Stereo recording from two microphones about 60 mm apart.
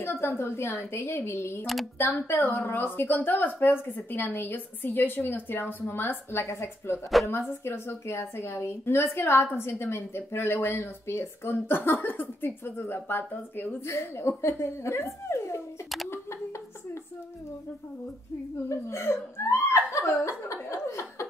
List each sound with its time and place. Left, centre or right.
0.0 s a woman's voice: left
13.8 s a woman's voice: left
18.7 s a woman's voice: left
20.6 s chuckle: left